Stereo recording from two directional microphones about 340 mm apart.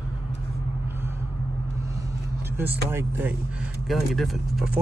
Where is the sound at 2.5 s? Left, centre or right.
Centre.